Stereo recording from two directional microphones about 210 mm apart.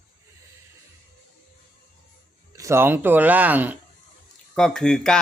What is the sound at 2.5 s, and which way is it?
Speech, 15° right (ahead or behind).